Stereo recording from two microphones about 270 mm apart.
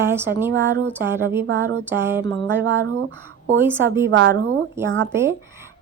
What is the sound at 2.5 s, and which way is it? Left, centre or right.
Speech, right.